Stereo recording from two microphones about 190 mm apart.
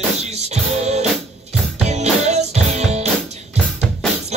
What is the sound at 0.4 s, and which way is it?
Music, 35° right (ahead or behind).